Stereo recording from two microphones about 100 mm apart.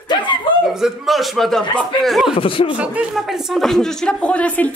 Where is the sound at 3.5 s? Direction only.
5° left (ahead or behind).